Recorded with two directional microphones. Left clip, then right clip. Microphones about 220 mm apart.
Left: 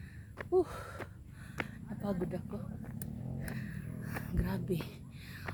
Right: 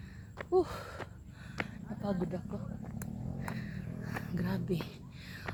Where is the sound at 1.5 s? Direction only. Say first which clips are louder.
Right 1 dB; 10° left (ahead or behind).